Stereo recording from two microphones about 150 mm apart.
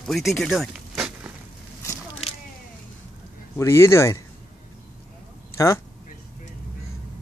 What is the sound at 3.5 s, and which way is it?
Speech, 20° left (ahead or behind).